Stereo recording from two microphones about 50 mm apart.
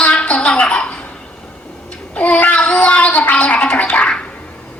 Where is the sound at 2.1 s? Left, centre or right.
Left.